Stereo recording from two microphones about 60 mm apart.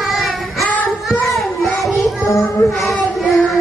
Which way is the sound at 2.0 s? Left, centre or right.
Centre.